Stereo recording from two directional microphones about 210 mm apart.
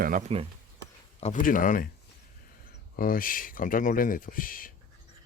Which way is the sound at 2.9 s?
45° left (ahead or behind).